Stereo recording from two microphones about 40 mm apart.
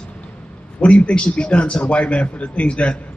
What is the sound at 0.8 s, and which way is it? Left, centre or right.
A man's voice, left.